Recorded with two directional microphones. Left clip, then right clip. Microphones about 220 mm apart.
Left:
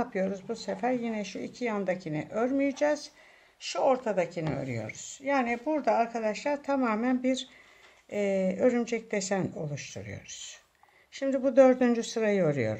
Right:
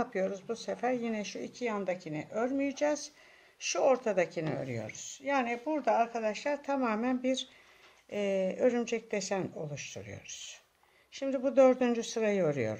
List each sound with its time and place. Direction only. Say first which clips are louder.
0.0 s speech: left 2 dB; 5° right (ahead or behind)
3.6 s speech: left 1 dB; 15° right (ahead or behind)